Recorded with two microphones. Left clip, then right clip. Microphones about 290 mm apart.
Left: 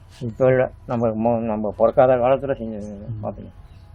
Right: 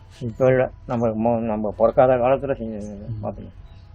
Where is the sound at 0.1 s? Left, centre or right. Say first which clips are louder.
Left 1 dB; centre.